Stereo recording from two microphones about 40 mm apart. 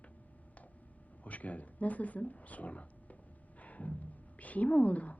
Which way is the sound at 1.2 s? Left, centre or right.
Left.